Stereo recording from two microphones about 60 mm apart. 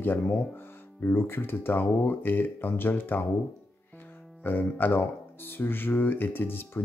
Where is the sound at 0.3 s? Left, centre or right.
Left.